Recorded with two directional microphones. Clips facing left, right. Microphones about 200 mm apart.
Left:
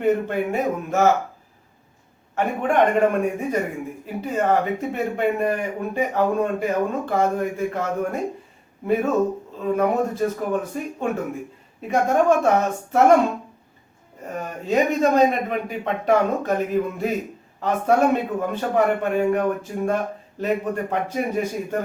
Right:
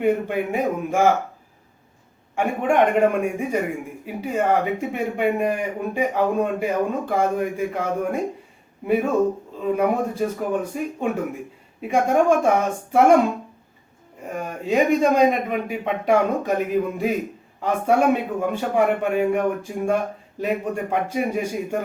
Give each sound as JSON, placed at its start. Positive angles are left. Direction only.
{"t": 0.0, "sound": "a man's voice", "side_deg": -10}
{"t": 2.3, "sound": "a man's voice", "side_deg": -10}
{"t": 14.3, "sound": "a man's voice", "side_deg": -10}
{"t": 17.6, "sound": "a man's voice", "side_deg": -10}